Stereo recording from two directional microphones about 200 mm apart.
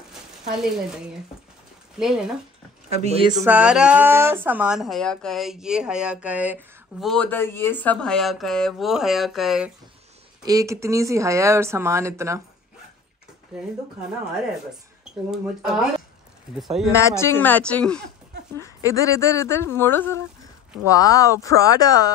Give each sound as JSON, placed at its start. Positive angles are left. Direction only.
{"t": 2.0, "sound": "speech", "side_deg": -5}
{"t": 3.0, "sound": "speech", "side_deg": -30}
{"t": 3.4, "sound": "speech", "side_deg": -5}
{"t": 10.4, "sound": "speech", "side_deg": -15}
{"t": 13.5, "sound": "speech", "side_deg": 0}
{"t": 15.3, "sound": "speech", "side_deg": 0}
{"t": 16.9, "sound": "speech", "side_deg": 15}